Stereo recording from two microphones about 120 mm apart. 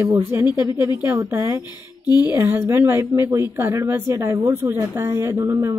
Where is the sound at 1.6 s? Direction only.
35° left (ahead or behind).